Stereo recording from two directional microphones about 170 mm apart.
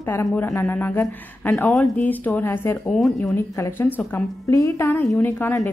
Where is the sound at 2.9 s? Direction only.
Centre (ahead or behind).